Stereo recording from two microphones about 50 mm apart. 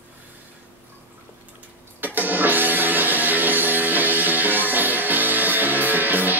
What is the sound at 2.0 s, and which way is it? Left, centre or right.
Music, right.